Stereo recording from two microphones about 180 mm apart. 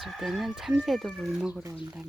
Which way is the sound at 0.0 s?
Centre (ahead or behind).